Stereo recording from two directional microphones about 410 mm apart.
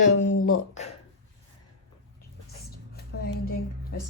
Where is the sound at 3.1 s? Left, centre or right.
Left.